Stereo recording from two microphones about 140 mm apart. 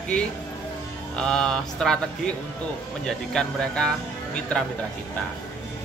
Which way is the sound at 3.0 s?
5° left (ahead or behind).